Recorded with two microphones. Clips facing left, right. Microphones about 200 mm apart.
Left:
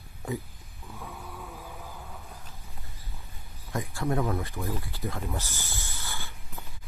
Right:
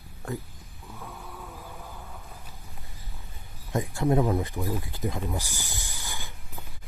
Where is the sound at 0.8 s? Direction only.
Centre (ahead or behind).